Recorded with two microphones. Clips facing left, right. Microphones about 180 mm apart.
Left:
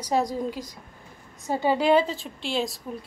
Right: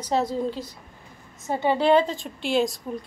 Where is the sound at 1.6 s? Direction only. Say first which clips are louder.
Right 1 dB; 10° left (ahead or behind).